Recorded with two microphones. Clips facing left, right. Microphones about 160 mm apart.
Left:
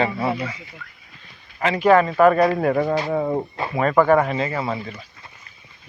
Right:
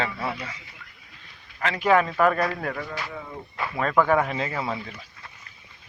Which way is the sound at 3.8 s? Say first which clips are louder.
Left 5 dB; 5° left (ahead or behind).